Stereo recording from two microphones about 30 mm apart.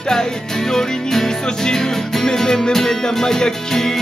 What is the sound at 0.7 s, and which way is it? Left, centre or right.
Music, centre.